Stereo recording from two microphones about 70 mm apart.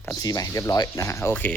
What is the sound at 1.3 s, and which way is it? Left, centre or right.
Speech, centre.